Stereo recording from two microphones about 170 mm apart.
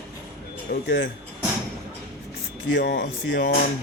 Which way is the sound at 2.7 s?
85° left.